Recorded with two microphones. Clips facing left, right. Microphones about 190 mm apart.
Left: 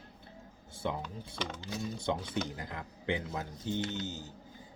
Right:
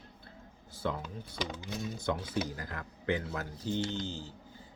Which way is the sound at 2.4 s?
20° left (ahead or behind).